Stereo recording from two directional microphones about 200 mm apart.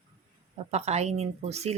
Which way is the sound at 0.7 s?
35° right (ahead or behind).